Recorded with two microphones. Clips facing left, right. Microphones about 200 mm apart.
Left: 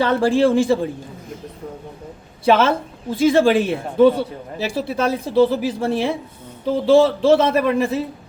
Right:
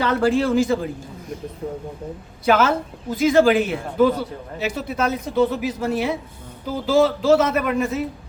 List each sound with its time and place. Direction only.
0.0 s a man's voice: 30° left (ahead or behind)
2.4 s a man's voice: 30° left (ahead or behind)